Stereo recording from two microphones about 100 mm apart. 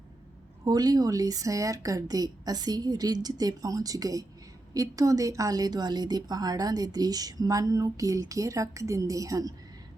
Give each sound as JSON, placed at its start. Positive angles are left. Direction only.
{"t": 0.6, "sound": "speech", "side_deg": -40}